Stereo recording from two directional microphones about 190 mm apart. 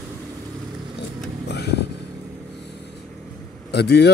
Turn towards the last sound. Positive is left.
turn(degrees=60)  # may be behind; listen again after turning